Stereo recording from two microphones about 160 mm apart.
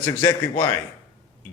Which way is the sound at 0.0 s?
25° left (ahead or behind).